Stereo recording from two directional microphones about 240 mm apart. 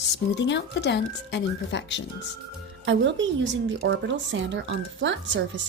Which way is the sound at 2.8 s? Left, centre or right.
Right.